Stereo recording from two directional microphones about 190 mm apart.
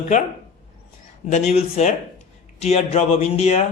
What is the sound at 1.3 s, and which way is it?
Speech, 35° left (ahead or behind).